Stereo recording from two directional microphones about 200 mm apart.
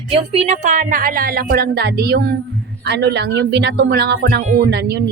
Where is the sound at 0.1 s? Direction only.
30° right (ahead or behind).